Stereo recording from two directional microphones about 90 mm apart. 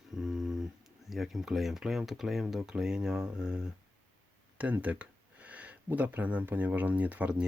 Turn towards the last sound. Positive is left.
turn(degrees=-15)  # may be behind; listen again after turning